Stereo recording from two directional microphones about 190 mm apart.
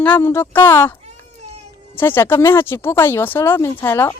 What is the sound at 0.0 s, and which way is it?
Speech, 10° left (ahead or behind).